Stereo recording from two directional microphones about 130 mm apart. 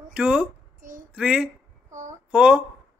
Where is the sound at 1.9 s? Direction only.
70° right (ahead or behind).